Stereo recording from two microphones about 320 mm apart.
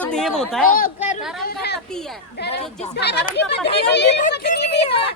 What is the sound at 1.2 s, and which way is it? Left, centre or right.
Speech, centre.